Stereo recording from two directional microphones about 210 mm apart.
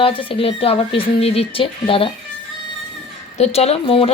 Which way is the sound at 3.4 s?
30° left (ahead or behind).